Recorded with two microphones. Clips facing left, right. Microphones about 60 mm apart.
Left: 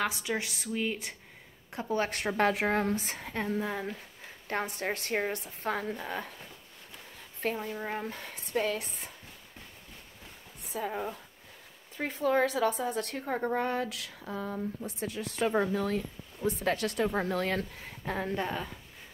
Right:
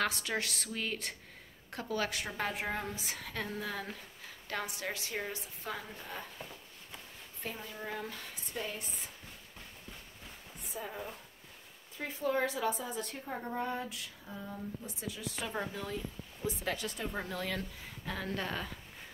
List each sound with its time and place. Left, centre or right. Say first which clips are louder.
0.0 s a woman's voice: left 2 dB; centre
1.7 s a woman's voice: left 5 dB; left
2.0 s a woman's voice: left 9 dB; left
3.2 s a woman's voice: left 6 dB; left
4.5 s a woman's voice: left 6 dB; left
7.6 s speech: left 6 dB; left
8.5 s a woman's voice: left 10 dB; left
10.7 s speech: left 8 dB; left
12.0 s a woman's voice: left 6 dB; left
14.8 s a woman's voice: left 7 dB; left
17.1 s a woman's voice: left 7 dB; left
18.0 s speech: left 6 dB; left
18.3 s a woman's voice: left 4 dB; centre